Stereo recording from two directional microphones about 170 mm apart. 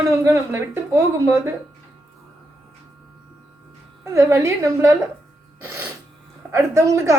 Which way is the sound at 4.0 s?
15° right (ahead or behind).